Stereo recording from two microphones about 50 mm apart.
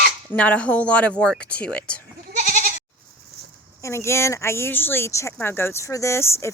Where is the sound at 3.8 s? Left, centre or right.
Left.